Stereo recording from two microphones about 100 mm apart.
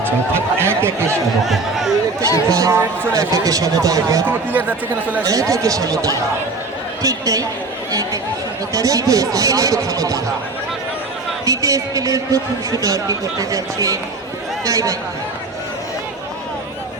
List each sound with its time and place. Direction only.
0.0 s speech: 25° right (ahead or behind)
1.5 s speech: centre (ahead or behind)
2.5 s speech: 35° right (ahead or behind)
5.2 s speech: 35° right (ahead or behind)
8.7 s speech: 35° right (ahead or behind)
11.4 s speech: 35° right (ahead or behind)